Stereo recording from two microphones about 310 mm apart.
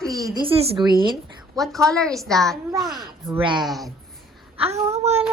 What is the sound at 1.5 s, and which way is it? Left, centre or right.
A woman's voice, centre.